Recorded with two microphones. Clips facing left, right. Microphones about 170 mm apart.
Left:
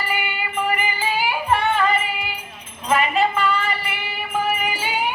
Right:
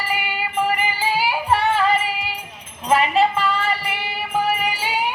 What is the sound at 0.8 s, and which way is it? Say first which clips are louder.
Music: right 2 dB; 30° right (ahead or behind).